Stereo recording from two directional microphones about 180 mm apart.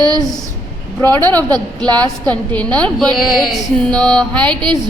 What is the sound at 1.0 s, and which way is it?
Speech, 15° left (ahead or behind).